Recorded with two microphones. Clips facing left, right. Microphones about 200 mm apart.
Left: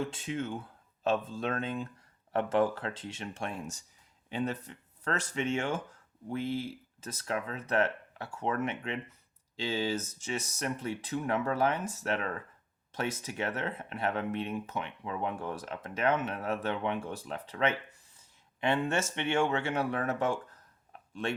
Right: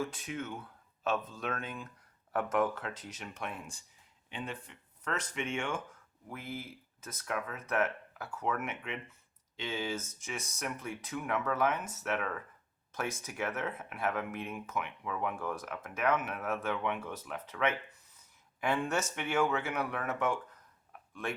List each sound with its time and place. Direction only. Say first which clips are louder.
0.0 s speech: left 3 dB; 25° left (ahead or behind)